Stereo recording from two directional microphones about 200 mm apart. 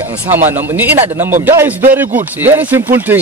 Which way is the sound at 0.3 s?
10° right (ahead or behind).